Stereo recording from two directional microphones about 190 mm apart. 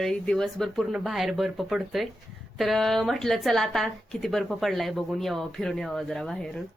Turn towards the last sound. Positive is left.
turn(degrees=0)  # may be behind; listen again after turning